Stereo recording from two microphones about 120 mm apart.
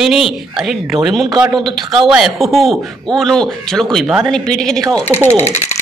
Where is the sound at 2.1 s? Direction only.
5° right (ahead or behind).